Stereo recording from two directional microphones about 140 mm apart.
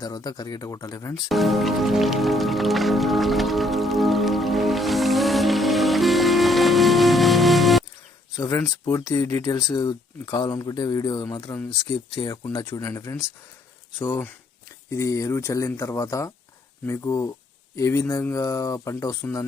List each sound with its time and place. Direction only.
0.0 s speech: 30° left (ahead or behind)
1.1 s speech: centre (ahead or behind)
8.4 s speech: 20° left (ahead or behind)